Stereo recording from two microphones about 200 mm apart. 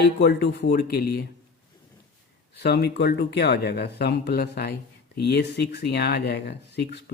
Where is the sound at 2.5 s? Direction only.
55° left (ahead or behind).